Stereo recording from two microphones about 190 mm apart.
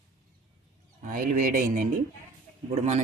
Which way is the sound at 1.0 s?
45° right (ahead or behind).